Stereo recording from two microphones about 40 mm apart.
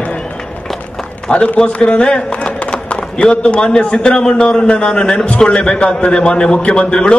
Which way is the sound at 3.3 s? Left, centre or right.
Left.